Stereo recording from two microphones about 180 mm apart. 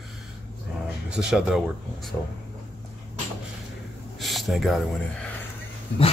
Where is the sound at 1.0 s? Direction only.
5° right (ahead or behind).